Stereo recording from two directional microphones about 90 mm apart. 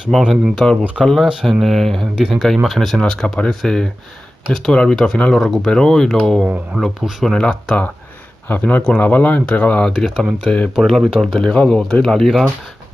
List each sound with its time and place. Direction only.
0.1 s speech: centre (ahead or behind)
6.4 s speech: 10° right (ahead or behind)
7.3 s speech: 10° left (ahead or behind)
9.9 s speech: 5° left (ahead or behind)
10.7 s speech: centre (ahead or behind)